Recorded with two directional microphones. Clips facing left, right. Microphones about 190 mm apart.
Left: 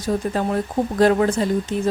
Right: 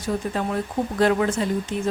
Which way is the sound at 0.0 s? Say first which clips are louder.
Left 3 dB; 40° left (ahead or behind).